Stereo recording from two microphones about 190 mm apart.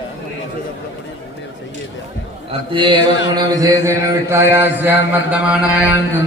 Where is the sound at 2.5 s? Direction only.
25° right (ahead or behind).